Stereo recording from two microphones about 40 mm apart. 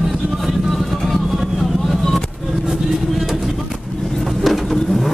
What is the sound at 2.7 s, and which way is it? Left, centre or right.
Vehicle, centre.